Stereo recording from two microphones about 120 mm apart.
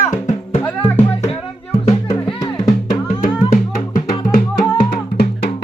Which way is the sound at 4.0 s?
45° left (ahead or behind).